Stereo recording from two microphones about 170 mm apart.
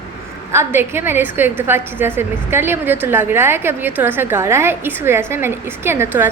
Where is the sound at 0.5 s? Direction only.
15° right (ahead or behind).